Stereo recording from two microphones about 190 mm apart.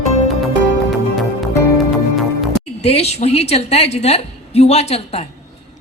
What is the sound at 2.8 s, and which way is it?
A woman's voice, 35° left (ahead or behind).